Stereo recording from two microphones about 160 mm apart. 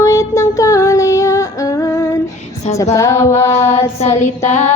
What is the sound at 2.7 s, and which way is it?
Music, 20° left (ahead or behind).